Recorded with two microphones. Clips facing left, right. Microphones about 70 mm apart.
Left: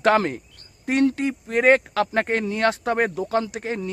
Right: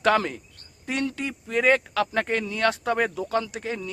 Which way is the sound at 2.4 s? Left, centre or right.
Left.